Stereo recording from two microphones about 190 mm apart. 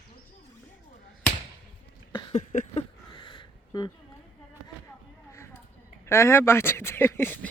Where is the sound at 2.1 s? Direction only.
30° left (ahead or behind).